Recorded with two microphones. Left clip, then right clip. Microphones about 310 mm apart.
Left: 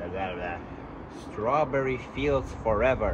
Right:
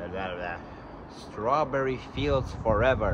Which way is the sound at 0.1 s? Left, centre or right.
Centre.